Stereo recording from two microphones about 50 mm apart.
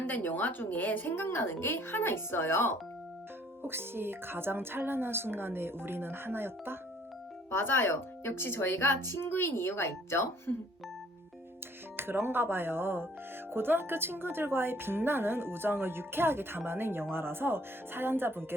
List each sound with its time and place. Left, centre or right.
0.0 s a woman's voice: left
3.6 s speech: right
7.5 s a woman's voice: left
11.9 s speech: right